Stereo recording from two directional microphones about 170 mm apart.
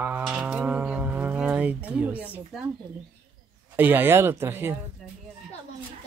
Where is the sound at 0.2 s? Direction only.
5° right (ahead or behind).